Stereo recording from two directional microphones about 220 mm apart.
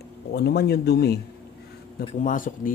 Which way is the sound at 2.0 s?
35° left (ahead or behind).